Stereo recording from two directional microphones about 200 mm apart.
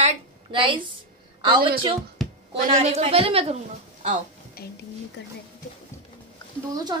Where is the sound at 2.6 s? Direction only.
40° right (ahead or behind).